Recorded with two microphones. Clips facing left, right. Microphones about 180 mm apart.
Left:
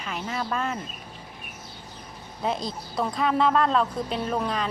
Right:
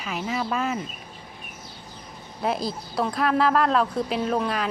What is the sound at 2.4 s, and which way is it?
Speech, 5° right (ahead or behind).